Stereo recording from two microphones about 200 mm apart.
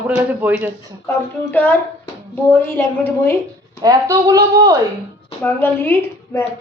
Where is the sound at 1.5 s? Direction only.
10° left (ahead or behind).